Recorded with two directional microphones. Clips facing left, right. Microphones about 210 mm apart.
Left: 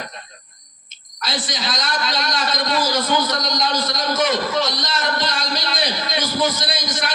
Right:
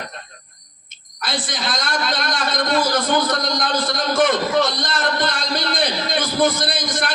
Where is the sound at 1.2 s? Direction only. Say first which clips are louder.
Right 1 dB; 50° right (ahead or behind).